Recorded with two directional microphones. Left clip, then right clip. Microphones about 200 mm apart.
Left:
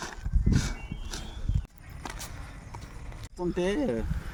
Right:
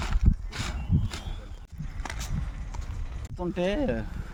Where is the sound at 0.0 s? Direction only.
10° right (ahead or behind).